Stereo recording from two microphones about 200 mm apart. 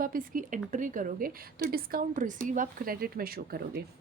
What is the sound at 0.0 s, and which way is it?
A woman's voice, 45° right (ahead or behind).